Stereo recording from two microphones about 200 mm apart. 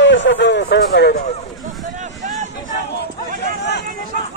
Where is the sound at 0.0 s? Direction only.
65° left (ahead or behind).